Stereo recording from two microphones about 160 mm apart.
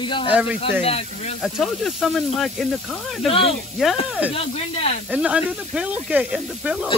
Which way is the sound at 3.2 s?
35° left (ahead or behind).